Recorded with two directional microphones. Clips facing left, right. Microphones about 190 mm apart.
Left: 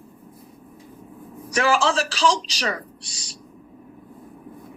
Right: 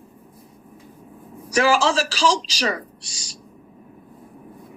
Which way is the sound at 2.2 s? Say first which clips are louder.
Even; 35° right (ahead or behind).